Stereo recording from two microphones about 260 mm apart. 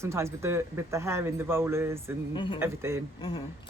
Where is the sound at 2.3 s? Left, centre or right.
Centre.